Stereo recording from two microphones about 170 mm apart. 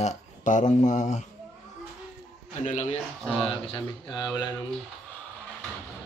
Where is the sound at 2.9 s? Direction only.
Centre (ahead or behind).